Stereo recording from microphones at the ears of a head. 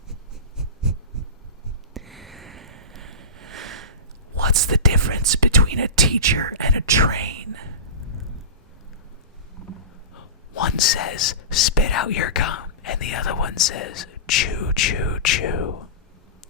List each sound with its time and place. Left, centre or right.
1.1 s a sound: right
4.4 s whispering: right
10.2 s whispering: left